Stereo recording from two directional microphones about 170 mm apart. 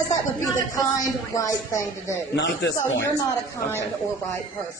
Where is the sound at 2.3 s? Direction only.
90° left.